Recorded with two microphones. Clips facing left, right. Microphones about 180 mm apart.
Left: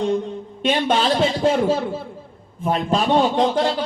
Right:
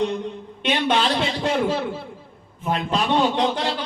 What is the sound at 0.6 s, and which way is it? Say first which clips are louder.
Speech: left 2 dB; 45° left (ahead or behind).